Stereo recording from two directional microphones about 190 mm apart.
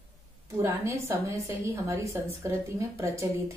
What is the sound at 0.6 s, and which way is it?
A woman's voice, 15° right (ahead or behind).